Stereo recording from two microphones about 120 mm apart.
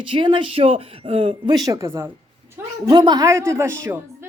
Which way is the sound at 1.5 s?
30° right (ahead or behind).